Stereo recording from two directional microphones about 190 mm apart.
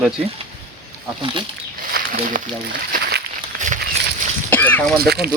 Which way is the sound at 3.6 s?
40° right (ahead or behind).